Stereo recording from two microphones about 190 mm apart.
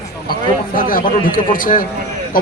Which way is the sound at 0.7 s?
45° left (ahead or behind).